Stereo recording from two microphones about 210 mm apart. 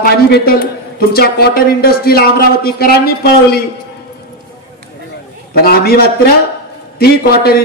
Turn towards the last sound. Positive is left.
turn(degrees=50)  # may be behind; listen again after turning